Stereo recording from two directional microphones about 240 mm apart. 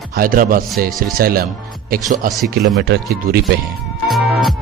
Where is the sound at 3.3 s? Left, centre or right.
Right.